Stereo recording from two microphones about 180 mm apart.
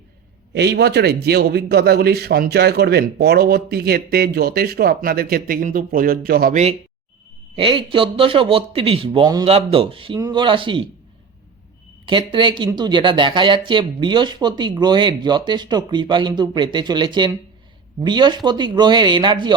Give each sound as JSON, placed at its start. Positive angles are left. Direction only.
{"t": 0.5, "sound": "a man's voice", "side_deg": -65}
{"t": 7.5, "sound": "speech", "side_deg": -30}
{"t": 12.0, "sound": "speech", "side_deg": -25}